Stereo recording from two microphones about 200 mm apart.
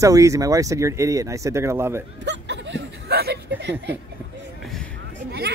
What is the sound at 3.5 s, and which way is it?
Speech, 60° right (ahead or behind).